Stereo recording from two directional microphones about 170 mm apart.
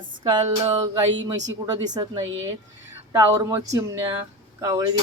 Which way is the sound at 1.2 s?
90° right.